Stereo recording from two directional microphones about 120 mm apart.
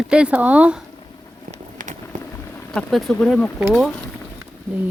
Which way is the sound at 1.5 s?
90° right.